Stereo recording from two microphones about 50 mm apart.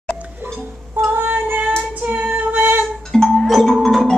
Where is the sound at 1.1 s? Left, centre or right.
Right.